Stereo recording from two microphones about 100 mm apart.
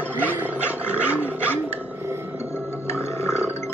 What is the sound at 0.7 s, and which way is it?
Roar, 20° left (ahead or behind).